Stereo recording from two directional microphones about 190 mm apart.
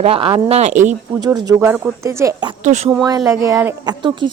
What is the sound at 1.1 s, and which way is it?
Speech, 20° right (ahead or behind).